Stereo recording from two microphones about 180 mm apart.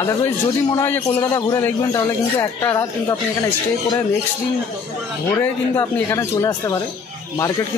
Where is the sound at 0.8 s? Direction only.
10° left (ahead or behind).